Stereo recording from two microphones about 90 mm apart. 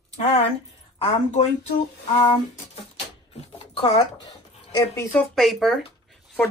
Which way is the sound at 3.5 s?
85° left.